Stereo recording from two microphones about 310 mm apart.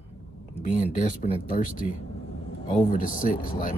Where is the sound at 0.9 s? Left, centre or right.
Left.